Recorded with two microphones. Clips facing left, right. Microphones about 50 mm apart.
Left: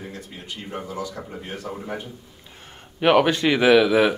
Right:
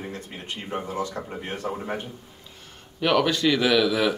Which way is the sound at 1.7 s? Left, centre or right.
Right.